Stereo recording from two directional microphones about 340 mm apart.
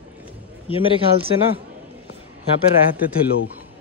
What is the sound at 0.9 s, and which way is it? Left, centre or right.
Speech, centre.